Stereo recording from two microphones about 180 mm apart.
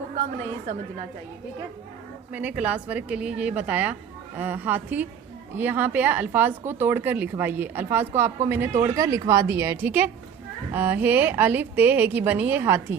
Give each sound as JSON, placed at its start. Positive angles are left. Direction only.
{"t": 2.3, "sound": "speech", "side_deg": -10}